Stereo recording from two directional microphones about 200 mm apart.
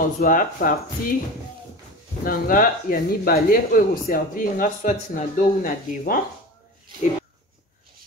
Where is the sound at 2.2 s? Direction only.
45° left (ahead or behind).